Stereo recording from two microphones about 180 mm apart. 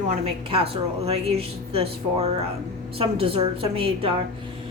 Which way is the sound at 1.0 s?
35° right (ahead or behind).